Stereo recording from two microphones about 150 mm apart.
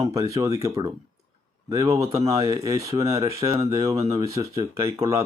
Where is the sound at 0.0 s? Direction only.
20° right (ahead or behind).